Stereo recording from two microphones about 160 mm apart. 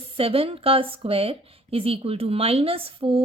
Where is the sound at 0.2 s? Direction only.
35° right (ahead or behind).